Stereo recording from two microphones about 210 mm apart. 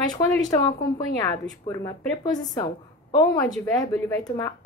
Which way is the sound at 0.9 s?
20° left (ahead or behind).